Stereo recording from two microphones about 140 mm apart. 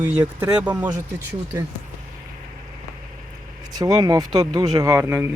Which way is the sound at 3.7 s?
25° right (ahead or behind).